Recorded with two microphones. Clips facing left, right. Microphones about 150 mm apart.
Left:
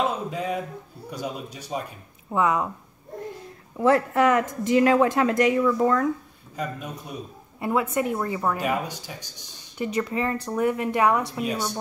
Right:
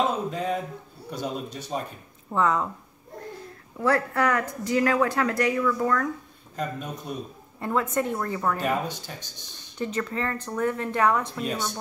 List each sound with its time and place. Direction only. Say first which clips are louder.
0.0 s a sound: even; 5° left (ahead or behind)
1.1 s speech: right 1 dB; 10° left (ahead or behind)
3.7 s speech: left 4 dB; 20° left (ahead or behind)
6.5 s a man's voice: even; 5° left (ahead or behind)